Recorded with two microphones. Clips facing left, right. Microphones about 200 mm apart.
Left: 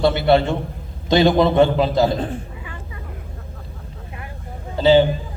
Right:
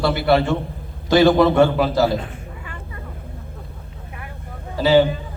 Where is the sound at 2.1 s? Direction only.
30° left (ahead or behind).